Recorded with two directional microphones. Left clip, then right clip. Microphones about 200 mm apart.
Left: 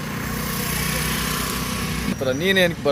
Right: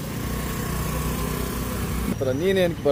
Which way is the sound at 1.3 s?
55° right (ahead or behind).